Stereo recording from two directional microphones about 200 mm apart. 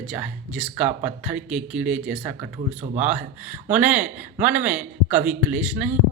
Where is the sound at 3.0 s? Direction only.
5° right (ahead or behind).